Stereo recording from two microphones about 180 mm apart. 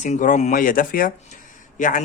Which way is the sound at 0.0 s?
45° left (ahead or behind).